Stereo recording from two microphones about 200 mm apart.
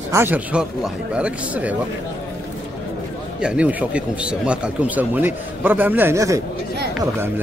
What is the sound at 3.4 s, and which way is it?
A man's voice, 5° right (ahead or behind).